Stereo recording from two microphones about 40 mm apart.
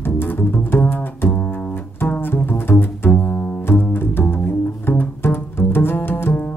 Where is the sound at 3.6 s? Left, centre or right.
Left.